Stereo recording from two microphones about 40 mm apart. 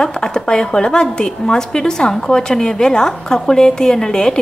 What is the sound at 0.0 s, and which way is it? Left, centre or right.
A woman's voice, centre.